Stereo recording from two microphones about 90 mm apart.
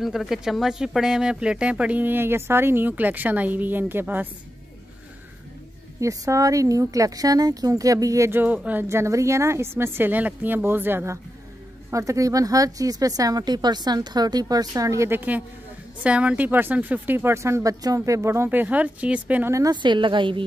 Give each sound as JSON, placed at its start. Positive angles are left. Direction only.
{"t": 0.0, "sound": "speech", "side_deg": 0}
{"t": 5.9, "sound": "speech", "side_deg": -35}
{"t": 8.3, "sound": "speech", "side_deg": -20}
{"t": 11.9, "sound": "speech", "side_deg": -35}
{"t": 15.1, "sound": "speech", "side_deg": -15}
{"t": 19.7, "sound": "a woman's voice", "side_deg": -60}